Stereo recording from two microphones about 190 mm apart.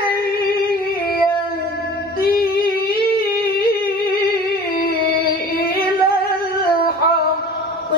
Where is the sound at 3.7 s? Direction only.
55° left (ahead or behind).